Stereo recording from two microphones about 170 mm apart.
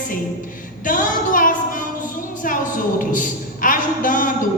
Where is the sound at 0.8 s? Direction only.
50° left (ahead or behind).